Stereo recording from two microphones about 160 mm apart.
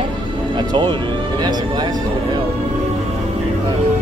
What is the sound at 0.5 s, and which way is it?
Music, 30° right (ahead or behind).